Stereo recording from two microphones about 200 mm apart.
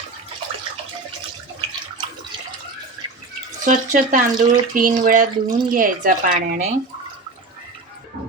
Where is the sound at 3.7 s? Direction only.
40° right (ahead or behind).